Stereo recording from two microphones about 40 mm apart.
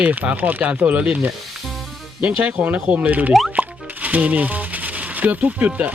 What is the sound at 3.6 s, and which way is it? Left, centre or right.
Music, right.